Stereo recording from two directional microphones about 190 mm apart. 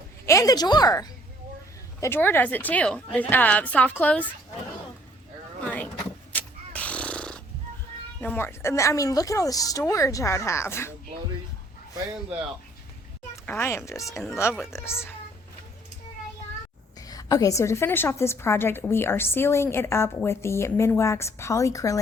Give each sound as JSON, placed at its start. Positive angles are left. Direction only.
{"t": 0.3, "sound": "a woman's voice", "side_deg": 15}
{"t": 5.6, "sound": "vehicle", "side_deg": 5}
{"t": 6.3, "sound": "a sound", "side_deg": 5}
{"t": 8.2, "sound": "a woman's voice", "side_deg": 10}
{"t": 13.4, "sound": "a woman's voice", "side_deg": 10}
{"t": 14.6, "sound": "a woman's voice", "side_deg": 0}
{"t": 17.0, "sound": "a woman's voice", "side_deg": 20}